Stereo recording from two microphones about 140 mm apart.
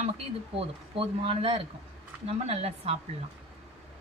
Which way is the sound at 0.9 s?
40° right (ahead or behind).